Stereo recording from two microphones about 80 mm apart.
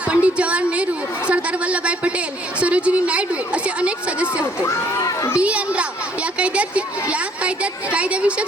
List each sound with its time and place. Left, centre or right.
0.1 s a woman's voice: centre
4.9 s a child's voice: left
5.4 s a woman's voice: centre